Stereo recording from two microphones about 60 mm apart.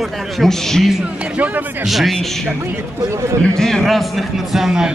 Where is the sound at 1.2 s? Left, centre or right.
Right.